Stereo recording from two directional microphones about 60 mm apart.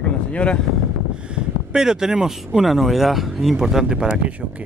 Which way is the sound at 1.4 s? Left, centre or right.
Centre.